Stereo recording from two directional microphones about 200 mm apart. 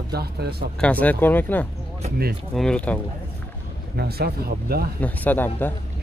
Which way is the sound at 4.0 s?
50° right (ahead or behind).